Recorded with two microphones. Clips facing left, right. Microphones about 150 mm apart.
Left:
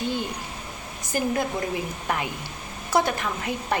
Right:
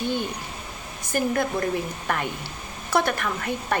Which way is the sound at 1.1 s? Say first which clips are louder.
Right 1 dB; 15° left (ahead or behind).